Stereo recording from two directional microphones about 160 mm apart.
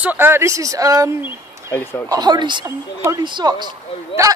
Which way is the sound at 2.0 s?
25° right (ahead or behind).